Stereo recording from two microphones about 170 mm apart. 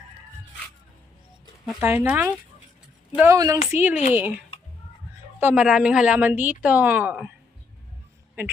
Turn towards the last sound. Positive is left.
turn(degrees=-10)  # may be behind; listen again after turning